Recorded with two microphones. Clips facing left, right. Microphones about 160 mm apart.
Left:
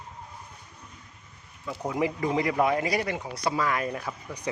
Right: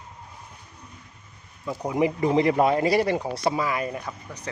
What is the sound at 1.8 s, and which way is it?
Speech, 20° right (ahead or behind).